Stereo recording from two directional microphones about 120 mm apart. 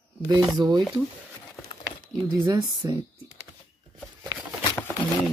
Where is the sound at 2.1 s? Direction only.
35° right (ahead or behind).